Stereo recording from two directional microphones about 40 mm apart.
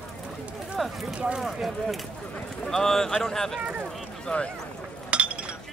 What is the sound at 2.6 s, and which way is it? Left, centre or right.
Speech, centre.